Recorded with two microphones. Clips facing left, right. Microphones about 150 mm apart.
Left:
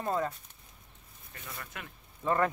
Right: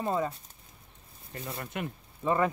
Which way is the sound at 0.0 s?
5° right (ahead or behind).